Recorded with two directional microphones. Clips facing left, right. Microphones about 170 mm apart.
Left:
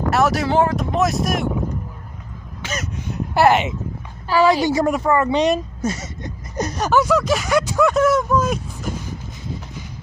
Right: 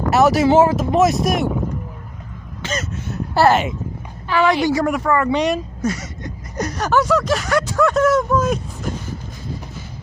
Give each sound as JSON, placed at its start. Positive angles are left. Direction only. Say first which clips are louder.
{"t": 0.1, "sound": "speech", "louder": "right 5 dB", "side_deg": 0}
{"t": 2.6, "sound": "speech", "louder": "right 2 dB", "side_deg": 10}
{"t": 4.3, "sound": "a woman's voice", "louder": "left 1 dB", "side_deg": 35}
{"t": 4.6, "sound": "speech", "louder": "even", "side_deg": 25}